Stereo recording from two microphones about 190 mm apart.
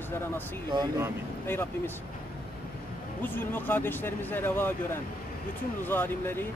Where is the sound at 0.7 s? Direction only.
20° right (ahead or behind).